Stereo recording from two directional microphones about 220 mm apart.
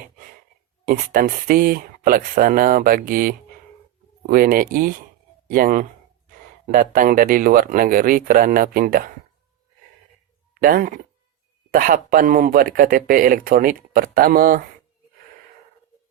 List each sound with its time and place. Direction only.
0.9 s speech: 40° right (ahead or behind)
10.5 s speech: 40° right (ahead or behind)